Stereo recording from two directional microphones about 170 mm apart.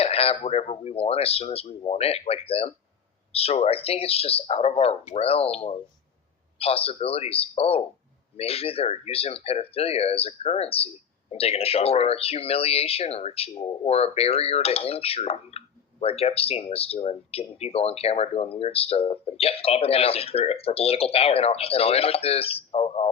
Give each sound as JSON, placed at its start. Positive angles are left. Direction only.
{"t": 0.0, "sound": "speech", "side_deg": 35}